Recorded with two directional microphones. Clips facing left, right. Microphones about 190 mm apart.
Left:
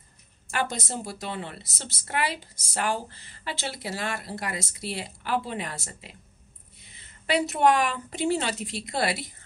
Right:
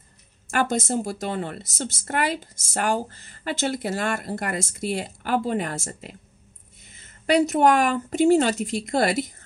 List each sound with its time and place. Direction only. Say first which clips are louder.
0.5 s speech: right 7 dB; 50° right (ahead or behind)